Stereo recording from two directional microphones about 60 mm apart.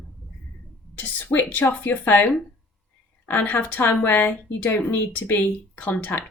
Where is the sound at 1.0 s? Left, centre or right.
Left.